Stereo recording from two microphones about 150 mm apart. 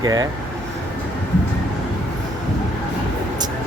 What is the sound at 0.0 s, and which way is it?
Speech, 25° right (ahead or behind).